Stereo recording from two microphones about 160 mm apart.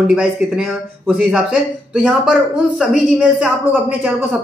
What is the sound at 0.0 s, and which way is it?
Speech, 5° right (ahead or behind).